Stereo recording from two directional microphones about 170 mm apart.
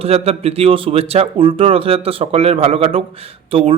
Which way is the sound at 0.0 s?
35° right (ahead or behind).